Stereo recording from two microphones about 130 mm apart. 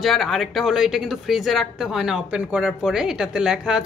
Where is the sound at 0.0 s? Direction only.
Centre (ahead or behind).